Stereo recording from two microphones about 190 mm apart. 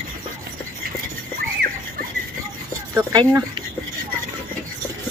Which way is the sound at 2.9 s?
15° right (ahead or behind).